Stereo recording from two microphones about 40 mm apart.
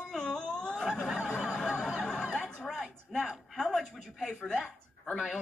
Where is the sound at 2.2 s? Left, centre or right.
Centre.